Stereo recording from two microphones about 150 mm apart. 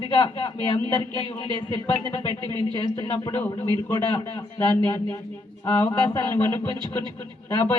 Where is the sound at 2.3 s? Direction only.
30° right (ahead or behind).